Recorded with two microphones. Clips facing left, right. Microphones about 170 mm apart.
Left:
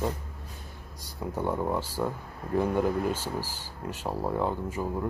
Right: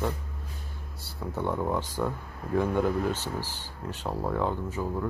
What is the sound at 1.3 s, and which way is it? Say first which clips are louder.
Speech: even; 10° left (ahead or behind).